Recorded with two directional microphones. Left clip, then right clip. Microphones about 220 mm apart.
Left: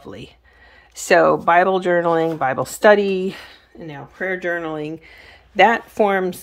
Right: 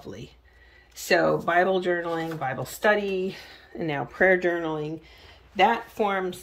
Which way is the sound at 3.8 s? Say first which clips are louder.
Right 5 dB; 5° right (ahead or behind).